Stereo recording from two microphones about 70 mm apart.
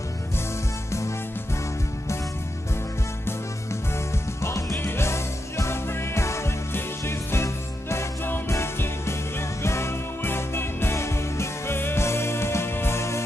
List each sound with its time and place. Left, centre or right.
4.4 s music: left